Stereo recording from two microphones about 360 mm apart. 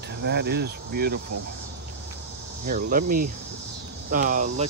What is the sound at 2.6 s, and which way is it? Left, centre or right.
Speech, right.